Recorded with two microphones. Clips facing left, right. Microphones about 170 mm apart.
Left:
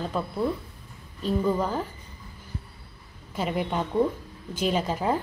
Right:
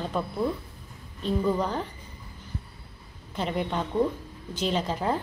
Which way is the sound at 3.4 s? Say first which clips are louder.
Left 1 dB; 5° left (ahead or behind).